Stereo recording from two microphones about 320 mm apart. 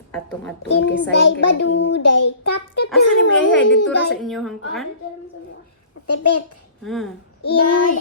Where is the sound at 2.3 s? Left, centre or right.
Left.